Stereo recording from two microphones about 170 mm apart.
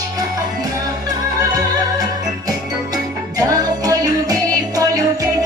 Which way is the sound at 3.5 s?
20° right (ahead or behind).